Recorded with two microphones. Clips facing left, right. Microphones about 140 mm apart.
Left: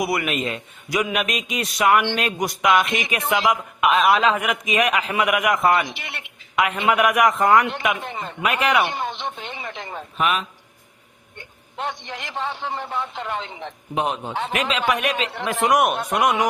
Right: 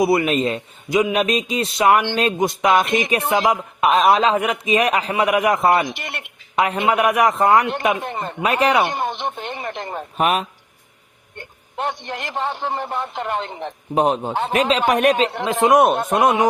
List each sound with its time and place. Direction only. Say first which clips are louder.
0.0 s speech: right 6 dB; 25° right (ahead or behind)
0.9 s speech: right 5 dB; 25° right (ahead or behind)
5.9 s a sound: right 5 dB; 50° right (ahead or behind)
6.8 s speech: right 1 dB; 30° right (ahead or behind)
8.0 s speech: right 4 dB; 50° right (ahead or behind)
8.4 s speech: right 3 dB; 35° right (ahead or behind)
8.9 s a sound: right 4 dB; 50° right (ahead or behind)
11.3 s a man's voice: right 4 dB; 50° right (ahead or behind)
15.4 s speech: right 4 dB; 20° right (ahead or behind)